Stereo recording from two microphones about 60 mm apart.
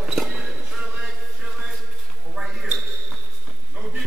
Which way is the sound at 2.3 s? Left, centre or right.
Centre.